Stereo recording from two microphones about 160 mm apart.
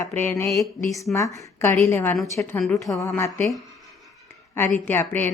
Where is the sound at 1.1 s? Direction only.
20° left (ahead or behind).